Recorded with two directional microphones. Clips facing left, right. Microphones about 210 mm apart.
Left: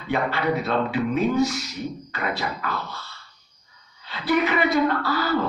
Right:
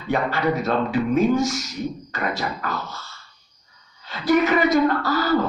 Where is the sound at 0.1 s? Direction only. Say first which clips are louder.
Right 2 dB; 45° right (ahead or behind).